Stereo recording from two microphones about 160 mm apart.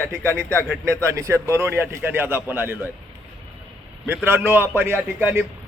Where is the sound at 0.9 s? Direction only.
20° right (ahead or behind).